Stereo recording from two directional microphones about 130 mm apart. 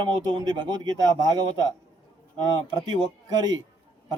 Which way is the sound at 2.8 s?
35° right (ahead or behind).